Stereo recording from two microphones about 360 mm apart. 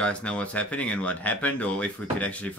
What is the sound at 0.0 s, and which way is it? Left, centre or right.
Speech, centre.